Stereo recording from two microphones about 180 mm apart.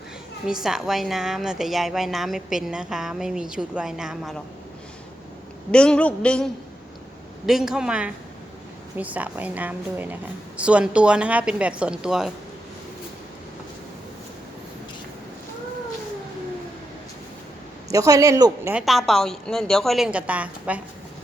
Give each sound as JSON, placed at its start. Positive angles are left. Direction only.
{"t": 0.4, "sound": "a woman's voice", "side_deg": -5}
{"t": 5.7, "sound": "a woman's voice", "side_deg": 5}
{"t": 17.9, "sound": "speech", "side_deg": -20}
{"t": 18.7, "sound": "a woman's voice", "side_deg": -5}